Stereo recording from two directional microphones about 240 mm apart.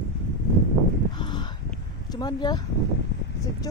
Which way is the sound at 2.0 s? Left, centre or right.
Centre.